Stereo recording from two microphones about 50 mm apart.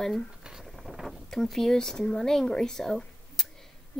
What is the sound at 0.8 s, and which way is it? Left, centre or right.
Boat, centre.